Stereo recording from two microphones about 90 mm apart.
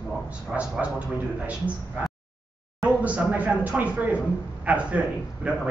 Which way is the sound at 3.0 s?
15° right (ahead or behind).